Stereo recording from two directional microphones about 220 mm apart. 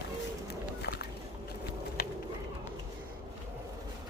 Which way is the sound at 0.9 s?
50° left (ahead or behind).